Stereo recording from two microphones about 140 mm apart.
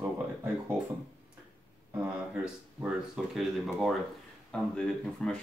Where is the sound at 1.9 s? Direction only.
10° right (ahead or behind).